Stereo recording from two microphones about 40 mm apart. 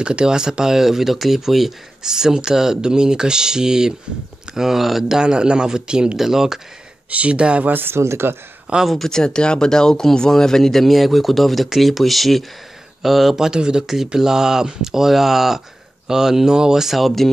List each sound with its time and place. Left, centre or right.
0.0 s speech: right
7.1 s speech: right
7.6 s speech: right
8.8 s speech: centre
9.1 s speech: centre
13.5 s speech: centre